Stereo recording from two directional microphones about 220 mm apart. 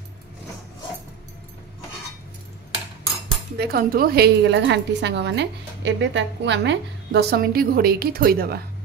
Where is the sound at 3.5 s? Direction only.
45° right (ahead or behind).